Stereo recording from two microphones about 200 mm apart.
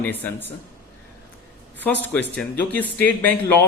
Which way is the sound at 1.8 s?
10° left (ahead or behind).